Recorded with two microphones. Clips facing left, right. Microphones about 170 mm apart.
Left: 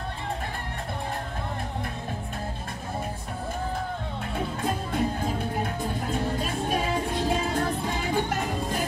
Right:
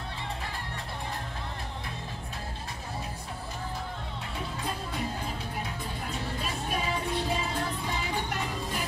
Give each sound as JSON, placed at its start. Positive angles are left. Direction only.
{"t": 4.6, "sound": "music", "side_deg": 50}